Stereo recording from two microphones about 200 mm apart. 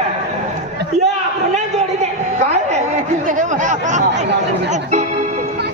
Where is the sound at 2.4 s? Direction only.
35° right (ahead or behind).